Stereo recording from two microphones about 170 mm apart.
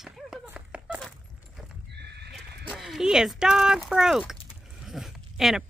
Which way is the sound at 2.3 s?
Centre (ahead or behind).